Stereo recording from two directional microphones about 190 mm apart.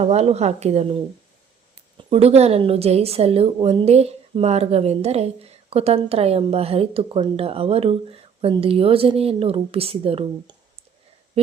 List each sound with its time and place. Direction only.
0.0 s a woman's voice: 35° right (ahead or behind)
2.0 s a woman's voice: 30° right (ahead or behind)